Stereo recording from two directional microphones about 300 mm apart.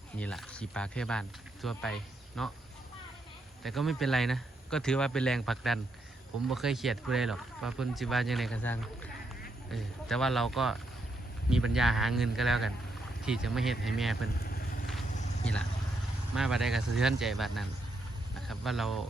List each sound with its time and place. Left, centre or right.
0.2 s speech: centre
3.6 s speech: centre
14.3 s vehicle: left
16.3 s speech: centre